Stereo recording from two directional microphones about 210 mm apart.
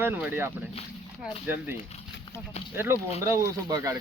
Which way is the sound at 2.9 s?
10° right (ahead or behind).